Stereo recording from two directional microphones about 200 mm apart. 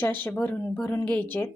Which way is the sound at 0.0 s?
10° left (ahead or behind).